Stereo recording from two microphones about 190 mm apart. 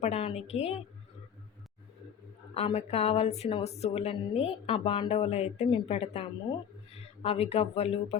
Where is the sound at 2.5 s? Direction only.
35° left (ahead or behind).